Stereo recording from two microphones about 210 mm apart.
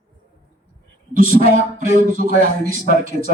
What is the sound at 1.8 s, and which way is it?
A man's voice, 35° right (ahead or behind).